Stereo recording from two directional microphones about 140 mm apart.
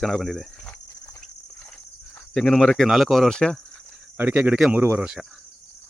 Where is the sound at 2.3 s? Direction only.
5° left (ahead or behind).